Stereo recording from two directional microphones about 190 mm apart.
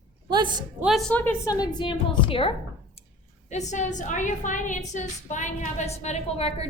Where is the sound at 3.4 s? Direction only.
40° left (ahead or behind).